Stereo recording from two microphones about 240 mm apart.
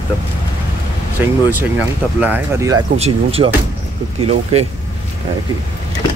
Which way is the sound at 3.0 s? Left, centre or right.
Right.